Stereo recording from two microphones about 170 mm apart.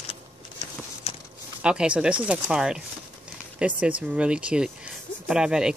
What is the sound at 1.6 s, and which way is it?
Speech, 5° right (ahead or behind).